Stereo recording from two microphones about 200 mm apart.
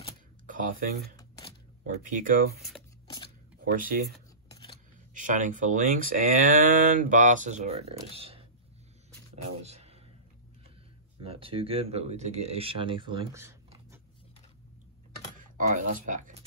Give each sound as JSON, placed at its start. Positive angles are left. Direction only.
{"t": 0.5, "sound": "speech", "side_deg": -40}
{"t": 1.1, "sound": "shuffling cards", "side_deg": 20}
{"t": 2.0, "sound": "speech", "side_deg": -40}
{"t": 4.5, "sound": "scissors", "side_deg": 20}
{"t": 5.1, "sound": "speech", "side_deg": -40}
{"t": 9.6, "sound": "a sound", "side_deg": -30}
{"t": 11.1, "sound": "speech", "side_deg": -25}
{"t": 15.5, "sound": "speech", "side_deg": -40}